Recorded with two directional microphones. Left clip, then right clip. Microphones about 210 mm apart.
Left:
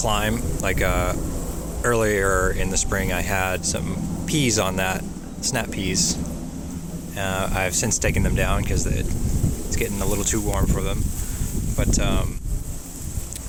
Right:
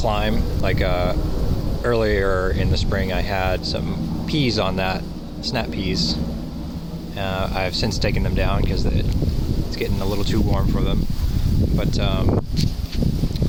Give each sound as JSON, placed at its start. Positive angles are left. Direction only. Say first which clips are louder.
{"t": 0.0, "sound": "speech", "louder": "right 1 dB", "side_deg": 5}
{"t": 7.2, "sound": "speech", "louder": "even", "side_deg": 0}